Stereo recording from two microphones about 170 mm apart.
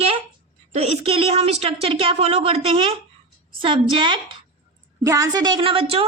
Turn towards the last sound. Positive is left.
turn(degrees=-35)  # may be behind; listen again after turning